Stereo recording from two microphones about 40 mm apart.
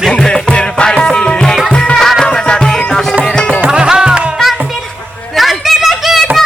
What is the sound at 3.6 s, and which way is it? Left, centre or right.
Music, right.